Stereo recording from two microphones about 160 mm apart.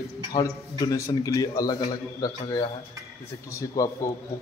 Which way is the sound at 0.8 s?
20° left (ahead or behind).